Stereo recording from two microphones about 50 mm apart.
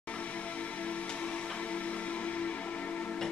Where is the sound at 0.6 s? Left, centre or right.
Left.